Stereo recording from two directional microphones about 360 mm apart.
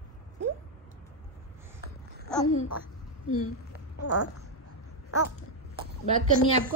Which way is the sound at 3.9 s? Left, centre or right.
Left.